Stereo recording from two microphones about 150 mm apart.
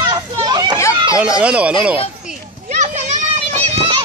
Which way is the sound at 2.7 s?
50° right (ahead or behind).